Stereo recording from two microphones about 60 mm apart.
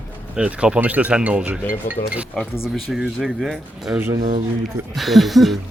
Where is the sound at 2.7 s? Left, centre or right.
Centre.